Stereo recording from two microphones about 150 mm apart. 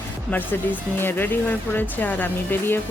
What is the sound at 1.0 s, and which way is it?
Speech, 15° left (ahead or behind).